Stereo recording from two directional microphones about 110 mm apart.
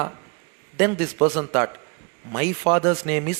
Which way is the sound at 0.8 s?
20° right (ahead or behind).